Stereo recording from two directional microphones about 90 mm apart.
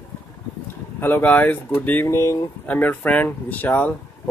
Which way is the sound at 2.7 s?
20° left (ahead or behind).